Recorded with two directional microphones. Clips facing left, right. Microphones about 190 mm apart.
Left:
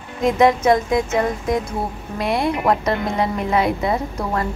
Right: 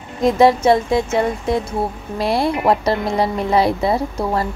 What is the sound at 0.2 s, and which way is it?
A woman's voice, 30° right (ahead or behind).